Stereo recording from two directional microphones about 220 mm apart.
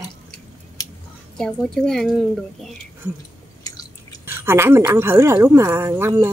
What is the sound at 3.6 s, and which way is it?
Chewing, 15° left (ahead or behind).